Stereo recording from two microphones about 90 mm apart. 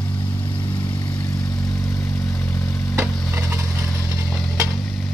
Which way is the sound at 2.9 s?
30° right (ahead or behind).